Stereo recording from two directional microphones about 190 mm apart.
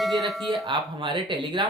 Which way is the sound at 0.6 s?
25° right (ahead or behind).